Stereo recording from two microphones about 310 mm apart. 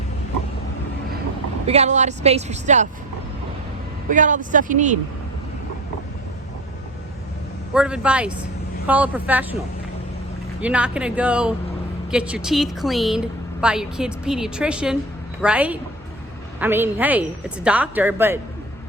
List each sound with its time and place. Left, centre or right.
1.6 s a woman's voice: right
4.1 s a woman's voice: right
7.7 s a woman's voice: centre
10.6 s a woman's voice: centre